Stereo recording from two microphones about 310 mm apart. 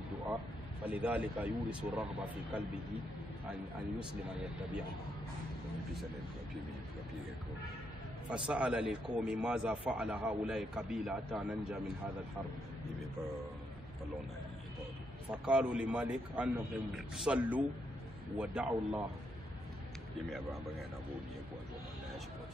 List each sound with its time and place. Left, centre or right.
0.8 s speech: centre
8.3 s speech: centre
15.3 s speech: centre